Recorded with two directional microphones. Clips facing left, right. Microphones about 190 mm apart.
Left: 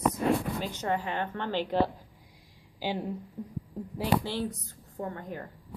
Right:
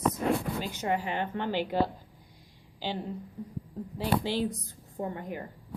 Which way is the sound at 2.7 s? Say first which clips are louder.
Left 2 dB; 10° left (ahead or behind).